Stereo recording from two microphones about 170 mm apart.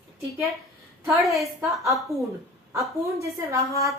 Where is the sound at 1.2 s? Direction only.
Centre (ahead or behind).